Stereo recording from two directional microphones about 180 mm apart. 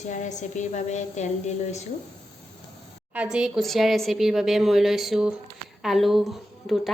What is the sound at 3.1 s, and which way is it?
Speech, 5° right (ahead or behind).